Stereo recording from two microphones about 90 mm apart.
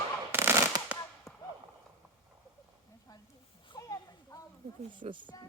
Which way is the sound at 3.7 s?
40° left (ahead or behind).